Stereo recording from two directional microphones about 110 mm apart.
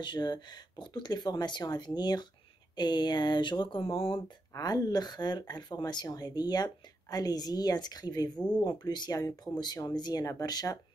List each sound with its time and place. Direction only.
0.0 s speech: 40° left (ahead or behind)
4.6 s speech: 35° left (ahead or behind)